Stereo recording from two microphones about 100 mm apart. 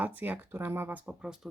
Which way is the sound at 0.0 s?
15° right (ahead or behind).